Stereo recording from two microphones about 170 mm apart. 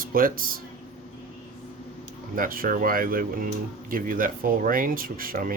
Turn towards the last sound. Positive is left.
turn(degrees=-55)  # may be behind; listen again after turning